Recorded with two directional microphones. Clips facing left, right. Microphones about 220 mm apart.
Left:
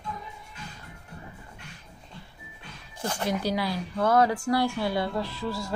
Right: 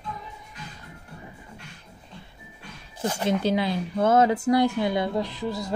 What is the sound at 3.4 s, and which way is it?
A woman's voice, 25° right (ahead or behind).